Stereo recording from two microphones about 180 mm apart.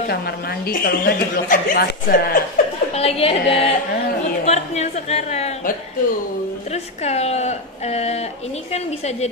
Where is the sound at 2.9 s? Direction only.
35° left (ahead or behind).